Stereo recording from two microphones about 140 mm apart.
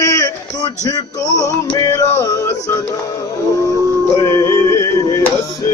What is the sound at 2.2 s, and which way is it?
Music, 20° left (ahead or behind).